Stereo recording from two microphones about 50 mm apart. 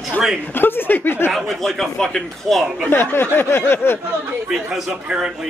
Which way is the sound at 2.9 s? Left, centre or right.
Left.